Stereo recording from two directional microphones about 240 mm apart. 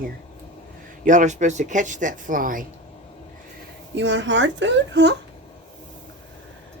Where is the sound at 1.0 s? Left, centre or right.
Right.